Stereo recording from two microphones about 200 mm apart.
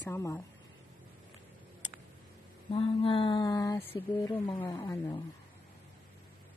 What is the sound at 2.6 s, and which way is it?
A woman's voice, 25° left (ahead or behind).